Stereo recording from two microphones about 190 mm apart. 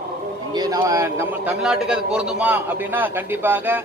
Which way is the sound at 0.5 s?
20° right (ahead or behind).